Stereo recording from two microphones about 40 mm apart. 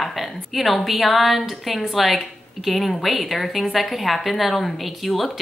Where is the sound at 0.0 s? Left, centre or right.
Centre.